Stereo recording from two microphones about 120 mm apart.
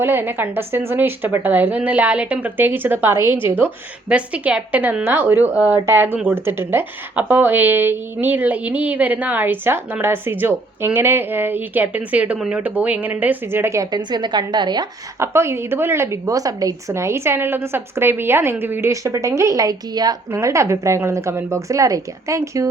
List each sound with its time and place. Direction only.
0.0 s a woman's voice: 15° right (ahead or behind)
13.9 s a woman's voice: 40° right (ahead or behind)
15.2 s a woman's voice: 20° right (ahead or behind)